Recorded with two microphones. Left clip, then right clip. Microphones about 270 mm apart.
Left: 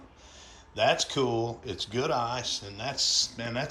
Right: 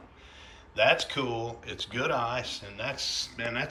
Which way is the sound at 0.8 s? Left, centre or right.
Centre.